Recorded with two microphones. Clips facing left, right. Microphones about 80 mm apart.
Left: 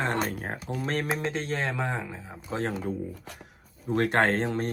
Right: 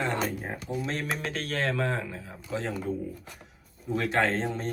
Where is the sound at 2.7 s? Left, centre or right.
Left.